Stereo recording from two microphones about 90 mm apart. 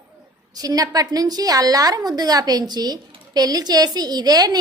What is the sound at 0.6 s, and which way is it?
A woman's voice, 45° right (ahead or behind).